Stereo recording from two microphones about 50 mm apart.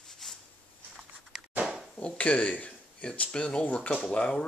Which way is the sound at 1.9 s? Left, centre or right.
Left.